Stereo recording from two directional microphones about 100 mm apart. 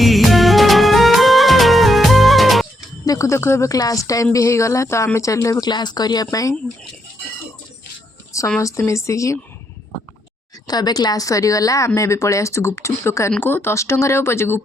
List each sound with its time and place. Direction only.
0.0 s music: centre (ahead or behind)
3.1 s speech: 30° left (ahead or behind)
8.6 s speech: 30° left (ahead or behind)
10.7 s speech: 40° left (ahead or behind); by 14.6 s 25° left (ahead or behind)